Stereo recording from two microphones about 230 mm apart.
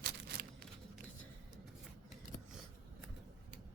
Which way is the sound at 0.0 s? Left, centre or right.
Right.